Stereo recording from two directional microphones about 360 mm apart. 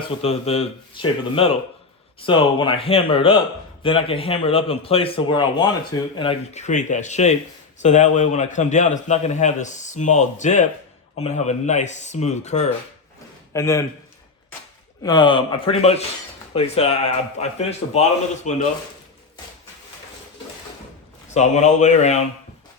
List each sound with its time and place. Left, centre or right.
0.2 s a man's voice: centre
15.0 s a man's voice: centre
21.2 s a man's voice: centre